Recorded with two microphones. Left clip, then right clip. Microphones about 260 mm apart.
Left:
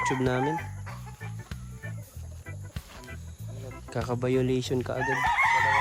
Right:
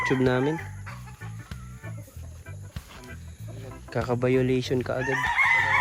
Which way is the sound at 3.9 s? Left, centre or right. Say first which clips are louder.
Right 4 dB; centre.